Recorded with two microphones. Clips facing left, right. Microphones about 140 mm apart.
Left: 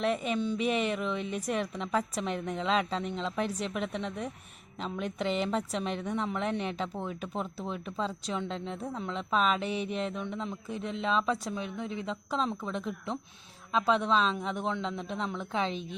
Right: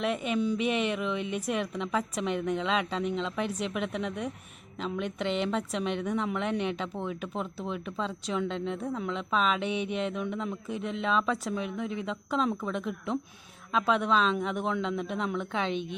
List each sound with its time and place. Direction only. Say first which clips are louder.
0.0 s a woman's voice: right 1 dB; centre (ahead or behind)
5.8 s speech: right 3 dB; 35° left (ahead or behind)
6.1 s a woman's voice: right 2 dB; centre (ahead or behind)
8.6 s speech: right 4 dB; 35° left (ahead or behind)
9.0 s a woman's voice: left 2 dB; centre (ahead or behind)
12.7 s a woman's voice: right 3 dB; centre (ahead or behind)
15.6 s speech: right 2 dB; 35° left (ahead or behind)